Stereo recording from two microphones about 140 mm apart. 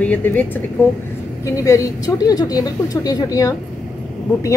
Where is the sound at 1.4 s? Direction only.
25° left (ahead or behind).